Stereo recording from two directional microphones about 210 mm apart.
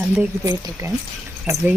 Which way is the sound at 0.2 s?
15° right (ahead or behind).